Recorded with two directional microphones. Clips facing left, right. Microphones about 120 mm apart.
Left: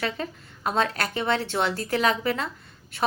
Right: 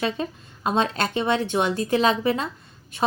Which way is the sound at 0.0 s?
20° right (ahead or behind).